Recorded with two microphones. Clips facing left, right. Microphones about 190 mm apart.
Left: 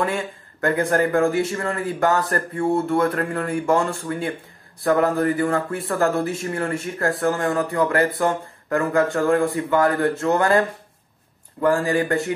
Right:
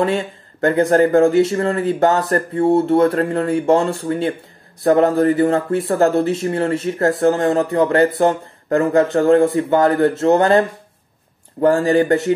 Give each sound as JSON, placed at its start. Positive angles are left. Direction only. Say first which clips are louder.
{"t": 0.0, "sound": "speech", "louder": "right 5 dB", "side_deg": -30}
{"t": 11.6, "sound": "speech", "louder": "right 5 dB", "side_deg": -25}